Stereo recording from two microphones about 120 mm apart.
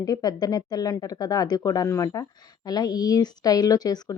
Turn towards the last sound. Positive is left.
turn(degrees=35)  # may be behind; listen again after turning